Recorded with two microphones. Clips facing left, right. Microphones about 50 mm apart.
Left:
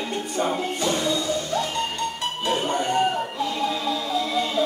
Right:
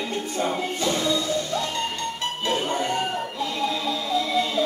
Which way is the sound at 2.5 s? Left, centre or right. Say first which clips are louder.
Left 2 dB; centre.